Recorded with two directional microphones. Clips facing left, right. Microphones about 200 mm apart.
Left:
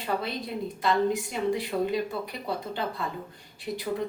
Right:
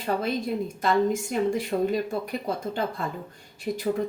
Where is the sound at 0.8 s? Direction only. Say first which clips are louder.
Right 2 dB; 45° right (ahead or behind).